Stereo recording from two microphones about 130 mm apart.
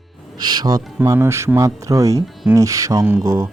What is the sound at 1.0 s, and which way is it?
Speech, 20° right (ahead or behind).